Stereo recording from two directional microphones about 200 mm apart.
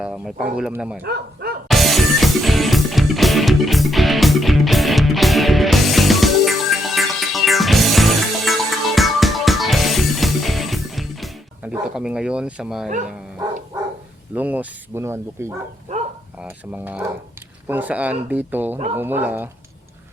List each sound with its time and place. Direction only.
0.0 s speech: 5° right (ahead or behind)
1.0 s bow-wow: 50° right (ahead or behind)
1.6 s music: centre (ahead or behind)
11.7 s speech: 5° right (ahead or behind)
14.3 s speech: 10° right (ahead or behind)